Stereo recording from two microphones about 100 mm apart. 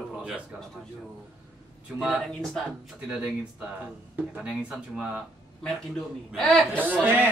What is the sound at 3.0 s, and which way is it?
Speech, 10° right (ahead or behind).